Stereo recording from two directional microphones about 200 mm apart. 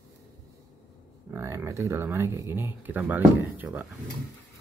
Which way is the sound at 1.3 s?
10° right (ahead or behind).